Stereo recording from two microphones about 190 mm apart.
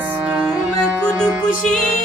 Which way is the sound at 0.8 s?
10° right (ahead or behind).